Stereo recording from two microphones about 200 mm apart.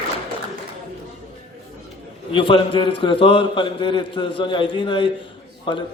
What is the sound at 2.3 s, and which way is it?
A man's voice, 25° left (ahead or behind).